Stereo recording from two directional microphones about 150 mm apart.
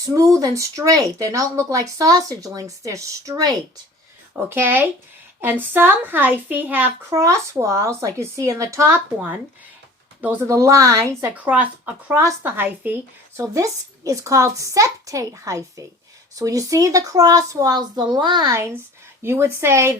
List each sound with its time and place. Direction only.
0.0 s a woman's voice: 20° right (ahead or behind)